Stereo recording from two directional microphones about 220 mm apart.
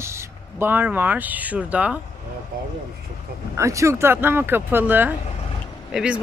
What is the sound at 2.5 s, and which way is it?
Speech, 40° right (ahead or behind).